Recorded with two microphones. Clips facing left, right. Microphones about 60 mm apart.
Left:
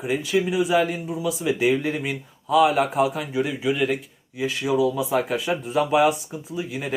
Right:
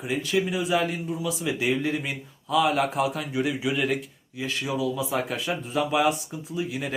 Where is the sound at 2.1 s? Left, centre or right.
Left.